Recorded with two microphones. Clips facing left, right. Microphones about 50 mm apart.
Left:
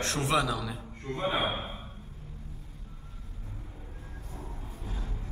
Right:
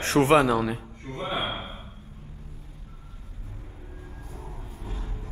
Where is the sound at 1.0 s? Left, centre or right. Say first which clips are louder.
Left 1 dB; left.